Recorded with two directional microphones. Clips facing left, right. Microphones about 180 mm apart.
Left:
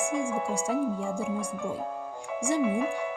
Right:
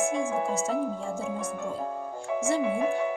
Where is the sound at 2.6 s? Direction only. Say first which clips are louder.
Right 1 dB; 35° right (ahead or behind).